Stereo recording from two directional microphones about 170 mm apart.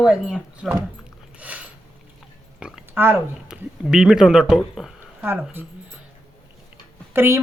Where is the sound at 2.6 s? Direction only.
10° right (ahead or behind).